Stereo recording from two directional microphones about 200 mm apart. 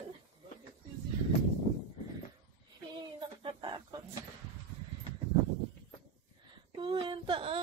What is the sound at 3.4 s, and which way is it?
Chicken, 25° right (ahead or behind).